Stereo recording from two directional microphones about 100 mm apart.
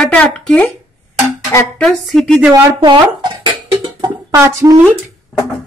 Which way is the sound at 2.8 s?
50° right (ahead or behind).